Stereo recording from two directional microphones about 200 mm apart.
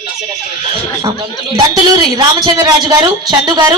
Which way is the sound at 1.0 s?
20° right (ahead or behind).